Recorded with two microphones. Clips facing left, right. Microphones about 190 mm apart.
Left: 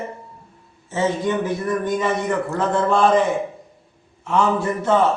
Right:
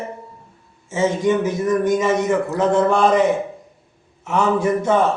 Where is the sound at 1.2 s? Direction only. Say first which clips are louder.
Right 4 dB; 20° right (ahead or behind).